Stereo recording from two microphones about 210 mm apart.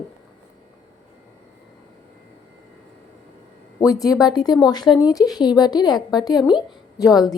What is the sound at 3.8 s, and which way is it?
A woman's voice, 15° left (ahead or behind).